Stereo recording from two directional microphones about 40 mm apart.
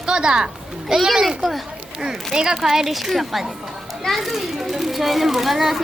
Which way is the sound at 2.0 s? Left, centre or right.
Centre.